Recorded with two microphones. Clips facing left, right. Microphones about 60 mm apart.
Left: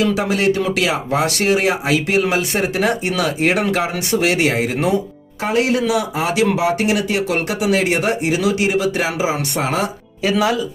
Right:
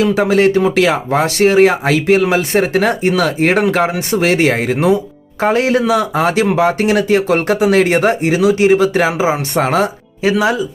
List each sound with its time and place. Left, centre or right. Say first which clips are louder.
0.0 s speech: right 5 dB; right